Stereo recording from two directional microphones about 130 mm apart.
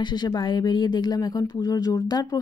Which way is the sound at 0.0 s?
35° left (ahead or behind).